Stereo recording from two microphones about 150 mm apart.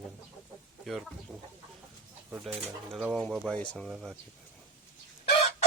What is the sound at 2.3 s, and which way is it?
Speech, centre (ahead or behind).